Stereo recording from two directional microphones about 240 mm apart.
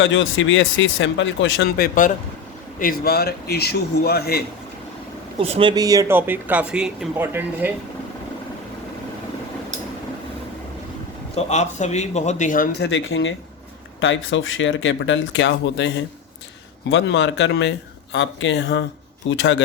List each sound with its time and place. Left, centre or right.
0.0 s speech: left
2.7 s a man's voice: left
5.4 s speech: right
11.3 s a man's voice: left
12.9 s speech: left